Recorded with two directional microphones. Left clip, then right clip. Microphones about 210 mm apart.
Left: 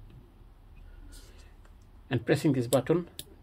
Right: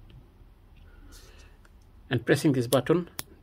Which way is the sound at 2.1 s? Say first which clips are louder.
Right 3 dB; 20° right (ahead or behind).